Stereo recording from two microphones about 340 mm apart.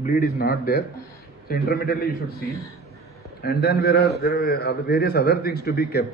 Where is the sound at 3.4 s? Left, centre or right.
Left.